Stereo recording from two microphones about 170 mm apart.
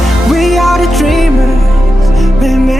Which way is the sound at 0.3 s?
Centre (ahead or behind).